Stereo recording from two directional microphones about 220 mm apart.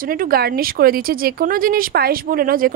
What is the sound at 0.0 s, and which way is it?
A woman's voice, 40° right (ahead or behind).